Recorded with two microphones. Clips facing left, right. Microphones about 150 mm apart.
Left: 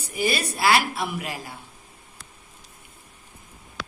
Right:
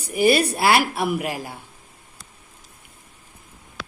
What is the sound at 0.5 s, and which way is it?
Speech, 50° right (ahead or behind).